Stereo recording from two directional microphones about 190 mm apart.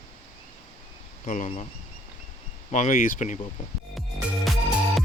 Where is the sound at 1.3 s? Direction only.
40° left (ahead or behind).